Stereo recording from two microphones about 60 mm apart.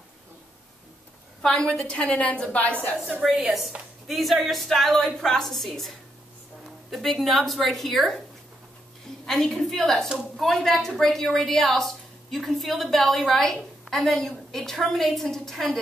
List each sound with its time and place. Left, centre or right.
1.4 s a woman's voice: centre
3.3 s a woman's voice: centre
9.2 s a woman's voice: centre